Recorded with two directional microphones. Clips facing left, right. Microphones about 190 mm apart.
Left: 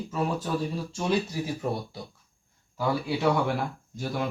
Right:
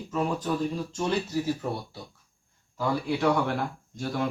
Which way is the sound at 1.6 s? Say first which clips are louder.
Left 2 dB; 15° left (ahead or behind).